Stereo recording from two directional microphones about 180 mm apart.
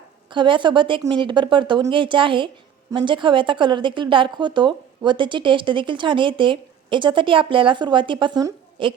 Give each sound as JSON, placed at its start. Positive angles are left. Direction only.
{"t": 0.3, "sound": "a woman's voice", "side_deg": -25}